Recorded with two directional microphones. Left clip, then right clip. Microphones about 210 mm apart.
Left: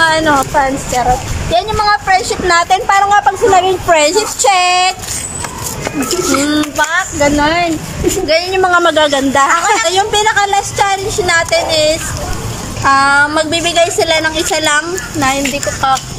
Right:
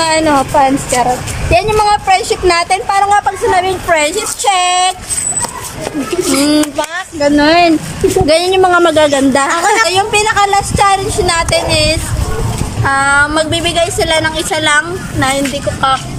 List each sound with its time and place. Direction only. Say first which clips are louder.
0.0 s a woman's voice: even; 10° right (ahead or behind); by 4.9 s 5° left (ahead or behind)
6.8 s a woman's voice: left 2 dB; 10° right (ahead or behind)